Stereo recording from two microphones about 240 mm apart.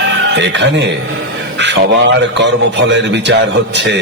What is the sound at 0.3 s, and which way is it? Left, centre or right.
Snicker, right.